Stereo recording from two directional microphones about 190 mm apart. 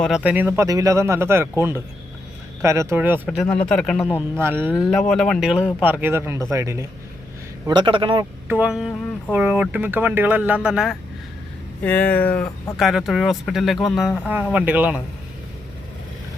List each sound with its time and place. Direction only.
0.0 s speech: 5° right (ahead or behind)
3.2 s speech: 5° left (ahead or behind)
4.4 s speech: 10° right (ahead or behind)
4.8 s a man's voice: centre (ahead or behind); by 8.3 s 25° right (ahead or behind)
8.4 s speech: 5° right (ahead or behind)
11.8 s speech: 10° left (ahead or behind); by 15.0 s 10° right (ahead or behind)